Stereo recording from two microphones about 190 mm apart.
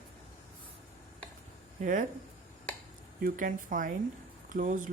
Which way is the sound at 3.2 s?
45° right (ahead or behind).